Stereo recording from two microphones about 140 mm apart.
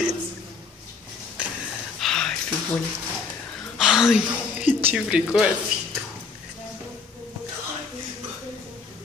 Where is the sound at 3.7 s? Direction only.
5° right (ahead or behind).